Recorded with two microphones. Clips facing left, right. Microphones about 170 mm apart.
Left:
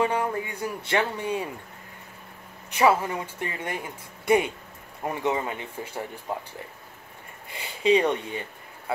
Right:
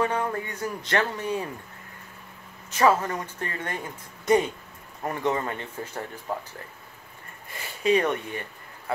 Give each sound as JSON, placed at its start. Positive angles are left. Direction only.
{"t": 0.0, "sound": "speech", "side_deg": 10}
{"t": 2.8, "sound": "speech", "side_deg": 10}
{"t": 5.0, "sound": "speech", "side_deg": 10}
{"t": 7.8, "sound": "speech", "side_deg": 20}